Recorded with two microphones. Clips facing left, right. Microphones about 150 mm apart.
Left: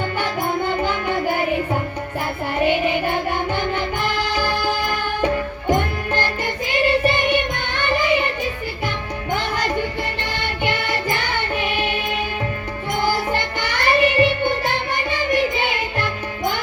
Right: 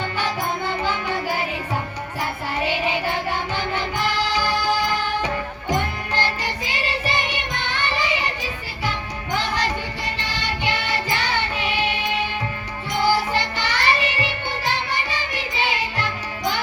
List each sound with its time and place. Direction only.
0.8 s music: 55° left (ahead or behind)
2.6 s music: 55° left (ahead or behind)
9.3 s music: 55° left (ahead or behind)